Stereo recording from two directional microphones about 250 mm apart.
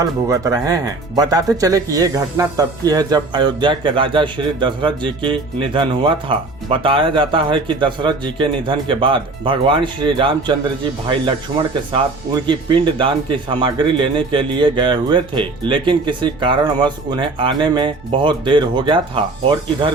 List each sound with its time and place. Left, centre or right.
0.0 s speech: centre
11.9 s speech: centre